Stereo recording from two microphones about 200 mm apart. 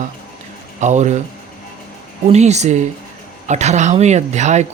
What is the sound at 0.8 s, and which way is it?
Speech, 35° right (ahead or behind).